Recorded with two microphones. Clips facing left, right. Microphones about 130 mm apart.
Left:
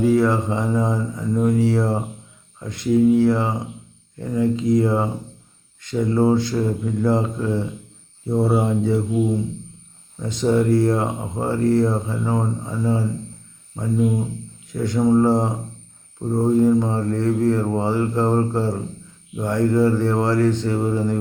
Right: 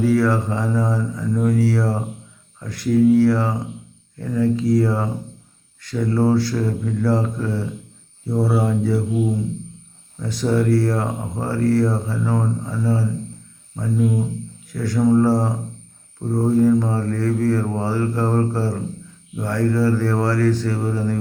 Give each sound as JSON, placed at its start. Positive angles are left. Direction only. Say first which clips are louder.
{"t": 0.0, "sound": "speech", "louder": "left 1 dB", "side_deg": 20}
{"t": 10.2, "sound": "speech", "louder": "left 1 dB", "side_deg": 20}